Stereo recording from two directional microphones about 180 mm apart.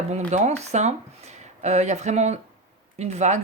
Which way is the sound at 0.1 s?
40° right (ahead or behind).